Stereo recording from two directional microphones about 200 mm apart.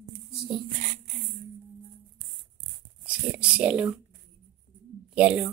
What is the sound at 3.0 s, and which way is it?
Speech, 5° right (ahead or behind).